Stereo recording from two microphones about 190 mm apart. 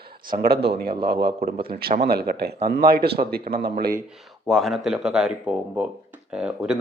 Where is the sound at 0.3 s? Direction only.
55° right (ahead or behind).